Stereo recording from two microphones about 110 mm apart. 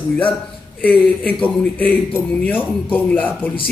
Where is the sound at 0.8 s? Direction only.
15° left (ahead or behind).